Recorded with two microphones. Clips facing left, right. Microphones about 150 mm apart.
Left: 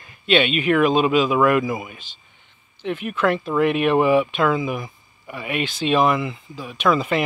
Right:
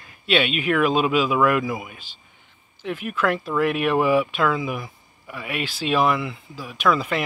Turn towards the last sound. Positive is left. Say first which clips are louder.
# left 2 dB
turn(degrees=0)  # may be behind; listen again after turning